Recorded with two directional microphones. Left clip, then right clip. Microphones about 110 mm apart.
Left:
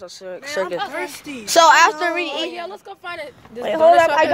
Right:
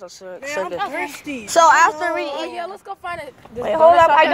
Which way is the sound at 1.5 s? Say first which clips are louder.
Left 1 dB; 55° left (ahead or behind).